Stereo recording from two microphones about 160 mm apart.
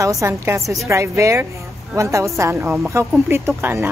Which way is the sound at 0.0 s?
20° right (ahead or behind).